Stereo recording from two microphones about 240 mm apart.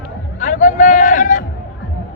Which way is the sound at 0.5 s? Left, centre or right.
Left.